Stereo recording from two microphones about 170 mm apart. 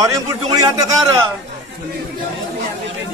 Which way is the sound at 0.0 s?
20° right (ahead or behind).